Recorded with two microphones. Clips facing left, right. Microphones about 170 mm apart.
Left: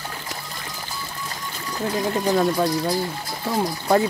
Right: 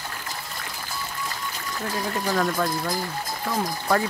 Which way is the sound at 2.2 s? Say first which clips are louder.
Left 4 dB; 25° left (ahead or behind).